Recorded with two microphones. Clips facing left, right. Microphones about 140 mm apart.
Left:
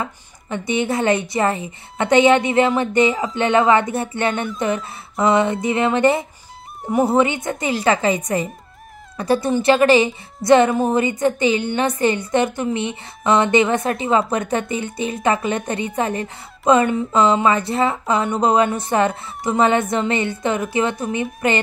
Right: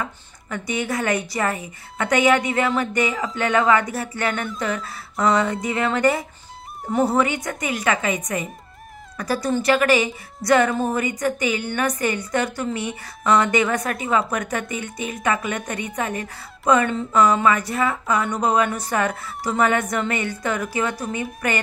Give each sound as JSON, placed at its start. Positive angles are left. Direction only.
{"t": 0.0, "sound": "a woman's voice", "side_deg": 25}
{"t": 6.8, "sound": "speech", "side_deg": 5}
{"t": 7.1, "sound": "a woman's voice", "side_deg": 25}